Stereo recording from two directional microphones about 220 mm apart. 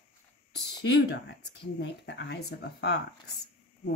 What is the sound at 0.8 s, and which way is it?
A woman's voice, 55° left (ahead or behind).